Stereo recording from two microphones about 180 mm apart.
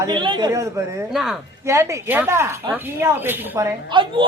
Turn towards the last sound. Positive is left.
turn(degrees=-25)  # may be behind; listen again after turning